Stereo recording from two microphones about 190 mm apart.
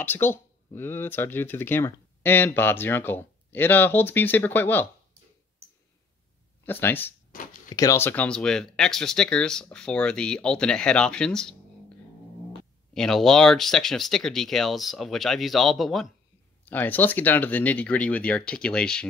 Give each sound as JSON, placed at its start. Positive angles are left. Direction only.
{"t": 0.0, "sound": "speech", "side_deg": 10}
{"t": 6.6, "sound": "speech", "side_deg": 10}
{"t": 12.9, "sound": "speech", "side_deg": 0}